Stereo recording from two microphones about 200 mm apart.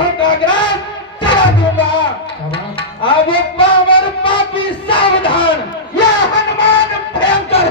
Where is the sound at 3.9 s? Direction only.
25° left (ahead or behind).